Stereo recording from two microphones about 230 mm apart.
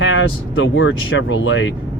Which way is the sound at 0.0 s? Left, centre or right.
Left.